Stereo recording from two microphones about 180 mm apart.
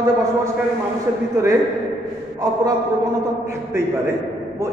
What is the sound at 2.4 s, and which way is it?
A man's voice, 20° right (ahead or behind).